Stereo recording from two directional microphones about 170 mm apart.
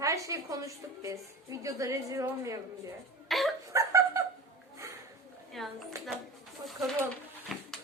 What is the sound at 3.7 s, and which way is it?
Dog, 20° right (ahead or behind).